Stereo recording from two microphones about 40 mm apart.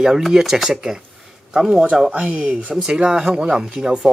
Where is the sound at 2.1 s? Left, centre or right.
Right.